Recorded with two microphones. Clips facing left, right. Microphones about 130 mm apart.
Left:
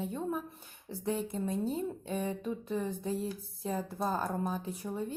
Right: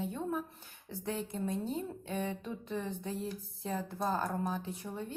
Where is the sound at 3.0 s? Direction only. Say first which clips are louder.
Left 3 dB; 30° left (ahead or behind).